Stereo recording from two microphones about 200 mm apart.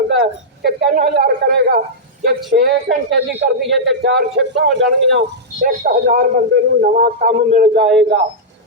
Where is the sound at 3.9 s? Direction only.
55° right (ahead or behind).